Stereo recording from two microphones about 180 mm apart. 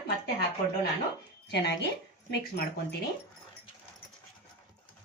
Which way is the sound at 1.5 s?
70° left (ahead or behind).